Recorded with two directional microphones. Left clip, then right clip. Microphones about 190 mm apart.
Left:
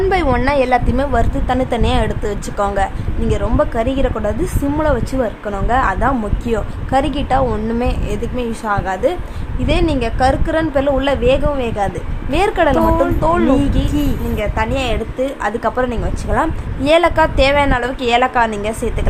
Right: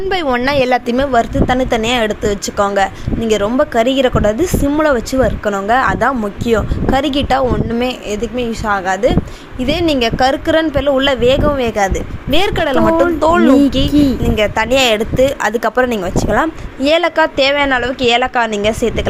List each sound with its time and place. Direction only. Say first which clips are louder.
0.1 s a woman's voice: right 1 dB; 15° right (ahead or behind)